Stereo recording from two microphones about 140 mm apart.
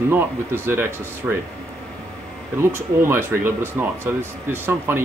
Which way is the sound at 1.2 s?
5° right (ahead or behind).